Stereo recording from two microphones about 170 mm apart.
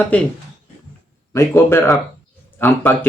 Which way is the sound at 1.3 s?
15° left (ahead or behind).